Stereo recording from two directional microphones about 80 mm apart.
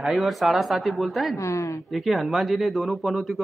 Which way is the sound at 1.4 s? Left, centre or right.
Left.